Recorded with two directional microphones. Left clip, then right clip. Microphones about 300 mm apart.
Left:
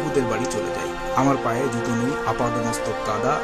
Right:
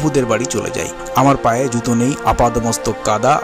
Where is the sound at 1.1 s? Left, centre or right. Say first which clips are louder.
Right 8 dB; right.